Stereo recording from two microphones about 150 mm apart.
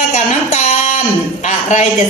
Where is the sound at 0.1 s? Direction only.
50° left (ahead or behind).